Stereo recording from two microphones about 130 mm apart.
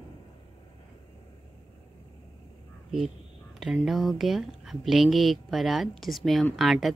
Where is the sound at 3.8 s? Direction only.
Centre (ahead or behind).